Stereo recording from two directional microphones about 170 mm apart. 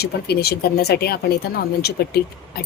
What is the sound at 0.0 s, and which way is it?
Speech, 70° left (ahead or behind).